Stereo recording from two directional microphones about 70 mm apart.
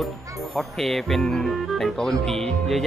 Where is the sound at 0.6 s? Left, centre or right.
Centre.